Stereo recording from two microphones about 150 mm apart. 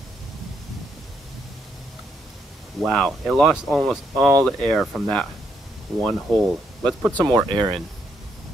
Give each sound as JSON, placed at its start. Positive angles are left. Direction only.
{"t": 2.8, "sound": "speech", "side_deg": 0}
{"t": 7.2, "sound": "speech", "side_deg": -30}